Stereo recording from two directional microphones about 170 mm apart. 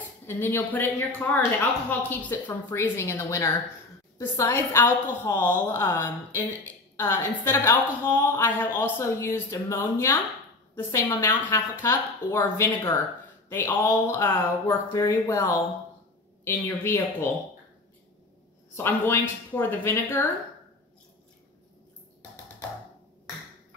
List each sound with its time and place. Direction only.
0.3 s a woman's voice: 15° left (ahead or behind)
18.8 s a woman's voice: 10° left (ahead or behind)